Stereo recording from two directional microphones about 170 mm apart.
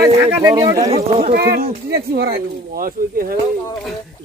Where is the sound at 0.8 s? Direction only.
40° right (ahead or behind).